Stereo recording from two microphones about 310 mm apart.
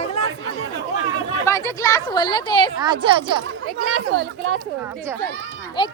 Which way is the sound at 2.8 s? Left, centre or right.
Centre.